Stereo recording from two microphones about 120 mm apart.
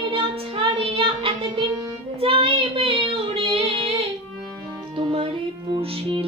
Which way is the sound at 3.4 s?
50° right (ahead or behind).